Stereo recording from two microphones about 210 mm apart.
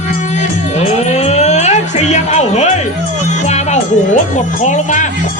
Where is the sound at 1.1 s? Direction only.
30° left (ahead or behind).